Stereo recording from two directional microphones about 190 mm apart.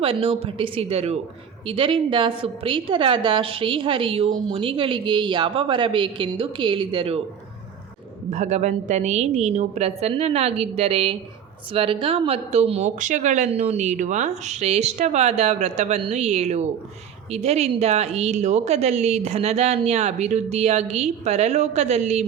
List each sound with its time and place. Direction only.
0.0 s a woman's voice: 30° right (ahead or behind)
8.3 s speech: 35° right (ahead or behind)